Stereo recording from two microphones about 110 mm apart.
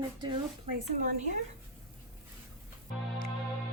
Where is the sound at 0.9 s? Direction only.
90° right.